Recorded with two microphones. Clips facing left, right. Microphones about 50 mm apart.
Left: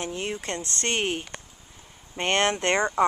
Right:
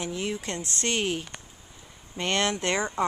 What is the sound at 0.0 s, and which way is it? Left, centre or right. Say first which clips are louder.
Speech: even; left.